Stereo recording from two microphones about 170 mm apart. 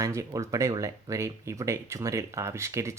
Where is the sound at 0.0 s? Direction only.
20° right (ahead or behind).